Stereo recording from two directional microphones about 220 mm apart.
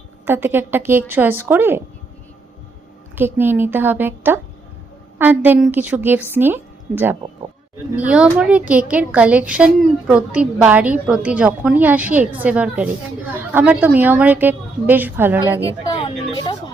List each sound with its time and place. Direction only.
0.3 s a woman's voice: 10° right (ahead or behind)
3.2 s a woman's voice: 10° right (ahead or behind)
15.6 s a sound: 20° left (ahead or behind)